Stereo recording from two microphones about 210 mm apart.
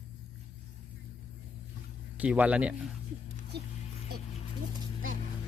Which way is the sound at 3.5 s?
50° right (ahead or behind).